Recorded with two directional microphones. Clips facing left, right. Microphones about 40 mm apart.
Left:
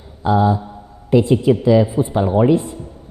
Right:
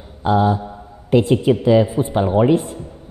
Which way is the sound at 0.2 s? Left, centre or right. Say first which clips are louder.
Left 1 dB; right.